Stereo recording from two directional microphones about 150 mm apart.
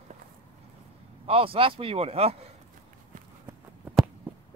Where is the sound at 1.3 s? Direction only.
40° right (ahead or behind).